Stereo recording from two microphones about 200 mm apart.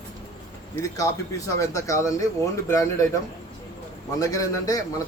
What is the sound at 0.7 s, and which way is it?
Speech, 15° left (ahead or behind).